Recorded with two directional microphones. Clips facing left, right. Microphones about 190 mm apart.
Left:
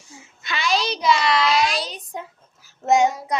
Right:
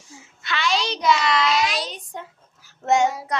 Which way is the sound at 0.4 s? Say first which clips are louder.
Left 1 dB; 10° left (ahead or behind).